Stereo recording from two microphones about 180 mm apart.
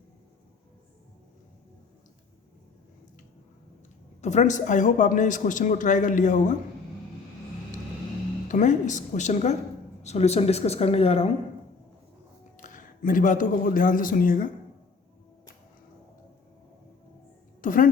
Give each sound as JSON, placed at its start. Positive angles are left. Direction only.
{"t": 4.2, "sound": "a man's voice", "side_deg": 40}
{"t": 8.4, "sound": "a man's voice", "side_deg": 45}
{"t": 12.6, "sound": "speech", "side_deg": 45}
{"t": 17.6, "sound": "a woman's voice", "side_deg": 45}